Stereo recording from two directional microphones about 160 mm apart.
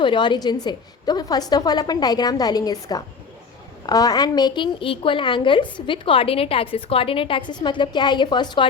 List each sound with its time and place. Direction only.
0.0 s a woman's voice: 30° left (ahead or behind)